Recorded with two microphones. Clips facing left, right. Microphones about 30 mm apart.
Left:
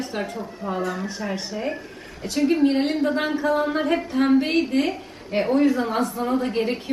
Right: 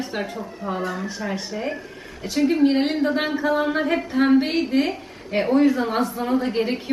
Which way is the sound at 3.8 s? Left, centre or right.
Centre.